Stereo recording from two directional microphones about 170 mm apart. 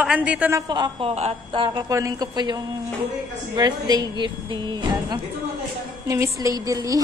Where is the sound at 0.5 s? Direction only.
25° right (ahead or behind).